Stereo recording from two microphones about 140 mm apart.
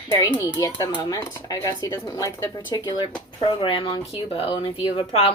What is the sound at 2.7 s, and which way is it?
A woman's voice, 30° left (ahead or behind).